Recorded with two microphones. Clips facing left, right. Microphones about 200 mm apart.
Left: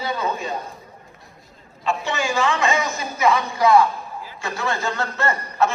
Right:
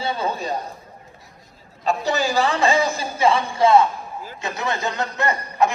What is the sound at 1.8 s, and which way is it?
A man's voice, 40° right (ahead or behind).